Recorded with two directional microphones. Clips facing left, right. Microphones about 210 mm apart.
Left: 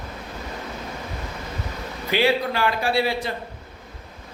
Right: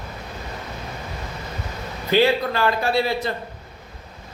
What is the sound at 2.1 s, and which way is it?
Speech, 10° left (ahead or behind).